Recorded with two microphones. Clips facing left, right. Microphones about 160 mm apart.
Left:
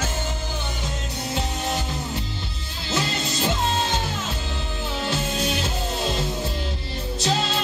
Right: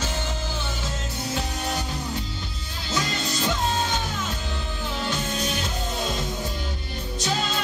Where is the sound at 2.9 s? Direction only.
25° left (ahead or behind).